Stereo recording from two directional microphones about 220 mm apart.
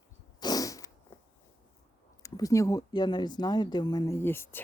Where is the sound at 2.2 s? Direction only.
15° left (ahead or behind).